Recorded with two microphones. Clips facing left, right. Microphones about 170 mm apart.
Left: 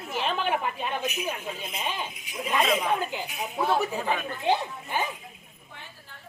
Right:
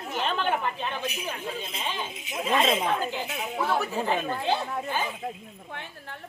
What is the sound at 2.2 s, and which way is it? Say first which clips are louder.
Speech: right 3 dB; 25° right (ahead or behind).